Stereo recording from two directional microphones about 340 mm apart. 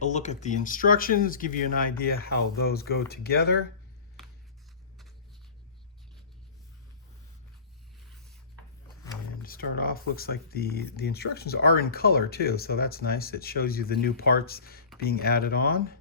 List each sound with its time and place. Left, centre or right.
0.0 s speech: left
9.4 s speech: left